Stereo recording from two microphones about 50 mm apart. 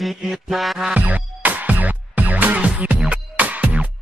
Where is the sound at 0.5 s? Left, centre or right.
Centre.